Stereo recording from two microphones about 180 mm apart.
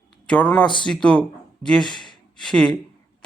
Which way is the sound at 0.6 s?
25° left (ahead or behind).